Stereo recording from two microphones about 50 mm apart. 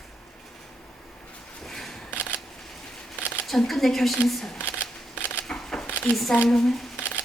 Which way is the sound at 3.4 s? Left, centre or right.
Centre.